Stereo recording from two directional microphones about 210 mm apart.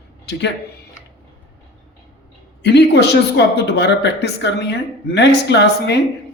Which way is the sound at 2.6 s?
55° left (ahead or behind).